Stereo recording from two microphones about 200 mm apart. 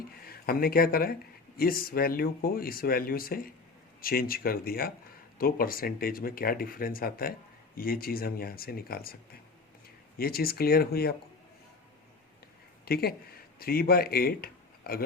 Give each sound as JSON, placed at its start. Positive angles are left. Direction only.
{"t": 0.3, "sound": "speech", "side_deg": 50}
{"t": 10.2, "sound": "speech", "side_deg": 50}
{"t": 12.8, "sound": "speech", "side_deg": 50}